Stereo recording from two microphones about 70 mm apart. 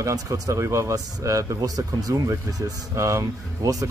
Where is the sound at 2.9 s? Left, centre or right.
Right.